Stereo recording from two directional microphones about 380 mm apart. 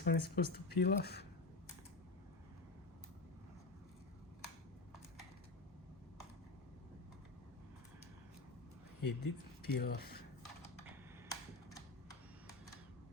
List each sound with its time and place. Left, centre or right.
0.0 s speech: left
9.0 s speech: left
9.7 s speech: left